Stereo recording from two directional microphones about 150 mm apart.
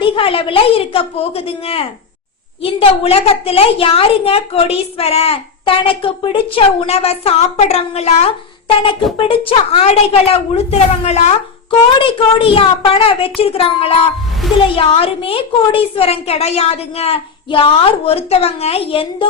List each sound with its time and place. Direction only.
0.0 s a woman's voice: 35° left (ahead or behind)
8.6 s a woman's voice: 35° left (ahead or behind)
11.9 s a woman's voice: 35° left (ahead or behind)
14.4 s speech: centre (ahead or behind)
14.8 s a woman's voice: 40° left (ahead or behind)